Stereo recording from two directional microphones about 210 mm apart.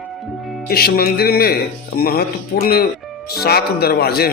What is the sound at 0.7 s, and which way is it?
A man's voice, 45° left (ahead or behind).